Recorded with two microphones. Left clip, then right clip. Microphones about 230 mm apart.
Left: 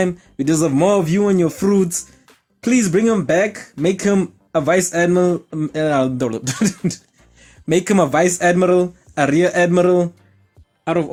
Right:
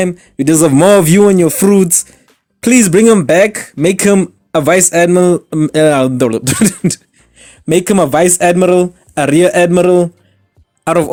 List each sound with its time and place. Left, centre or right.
0.0 s speech: right
10.8 s speech: right